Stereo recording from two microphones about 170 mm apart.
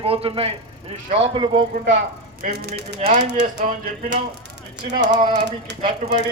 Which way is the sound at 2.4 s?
70° right (ahead or behind).